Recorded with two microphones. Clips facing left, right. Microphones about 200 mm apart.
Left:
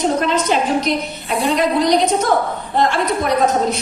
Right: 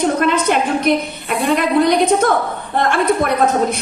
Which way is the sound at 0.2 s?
55° right (ahead or behind).